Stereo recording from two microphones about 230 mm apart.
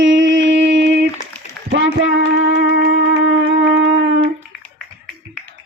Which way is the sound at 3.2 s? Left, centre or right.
Right.